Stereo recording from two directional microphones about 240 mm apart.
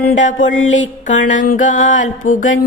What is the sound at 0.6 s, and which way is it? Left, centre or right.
Mantra, left.